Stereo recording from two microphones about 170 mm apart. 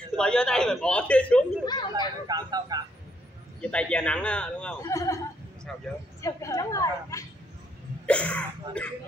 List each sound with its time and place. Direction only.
0.1 s a man's voice: 5° left (ahead or behind)
1.7 s a woman's voice: 25° left (ahead or behind)
2.2 s speech: 25° right (ahead or behind)
3.6 s a man's voice: 5° left (ahead or behind)
4.8 s a woman's voice: 20° left (ahead or behind)
5.7 s speech: 5° left (ahead or behind)
6.2 s a woman's voice: 20° left (ahead or behind)
8.1 s a man's voice: 5° left (ahead or behind)